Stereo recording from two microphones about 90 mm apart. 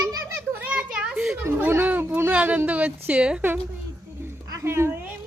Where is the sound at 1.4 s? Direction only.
25° right (ahead or behind).